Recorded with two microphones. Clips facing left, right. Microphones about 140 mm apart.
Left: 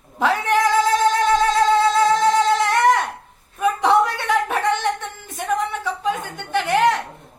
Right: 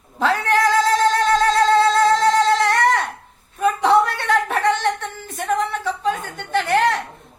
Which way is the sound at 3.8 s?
15° left (ahead or behind).